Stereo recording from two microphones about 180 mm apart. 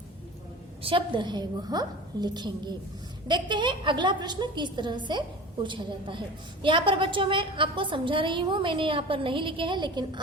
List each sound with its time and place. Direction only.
0.8 s a woman's voice: 30° right (ahead or behind)